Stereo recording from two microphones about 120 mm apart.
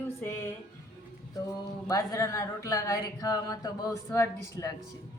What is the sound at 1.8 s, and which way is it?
Speech, 30° left (ahead or behind).